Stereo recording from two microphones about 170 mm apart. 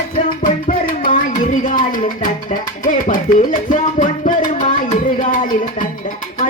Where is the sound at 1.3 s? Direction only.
50° left (ahead or behind).